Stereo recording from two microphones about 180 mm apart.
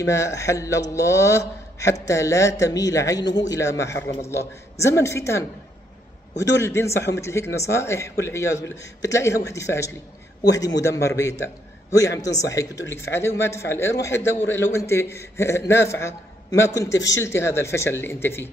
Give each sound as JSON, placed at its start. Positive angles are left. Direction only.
{"t": 0.0, "sound": "a man's voice", "side_deg": 15}
{"t": 6.6, "sound": "a man's voice", "side_deg": 15}